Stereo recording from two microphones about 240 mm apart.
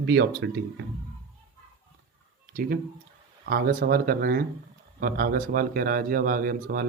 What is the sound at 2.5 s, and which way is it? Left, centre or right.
A man's voice, right.